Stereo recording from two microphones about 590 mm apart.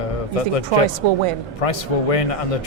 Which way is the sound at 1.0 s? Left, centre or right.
Right.